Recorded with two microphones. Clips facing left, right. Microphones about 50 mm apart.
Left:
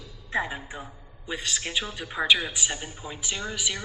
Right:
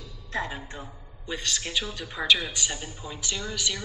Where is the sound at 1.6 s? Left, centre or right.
Centre.